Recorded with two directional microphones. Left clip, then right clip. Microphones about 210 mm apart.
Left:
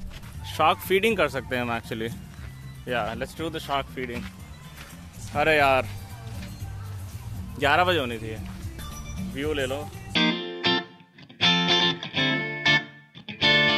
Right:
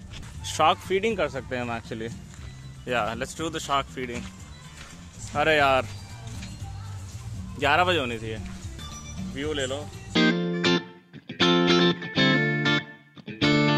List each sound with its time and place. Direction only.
0.5 s a sound: 10° right (ahead or behind)
0.8 s speech: 10° left (ahead or behind)
2.9 s speech: 20° right (ahead or behind)
5.3 s speech: 10° right (ahead or behind)
7.5 s speech: centre (ahead or behind)
9.3 s music: 5° left (ahead or behind)
13.4 s music: centre (ahead or behind)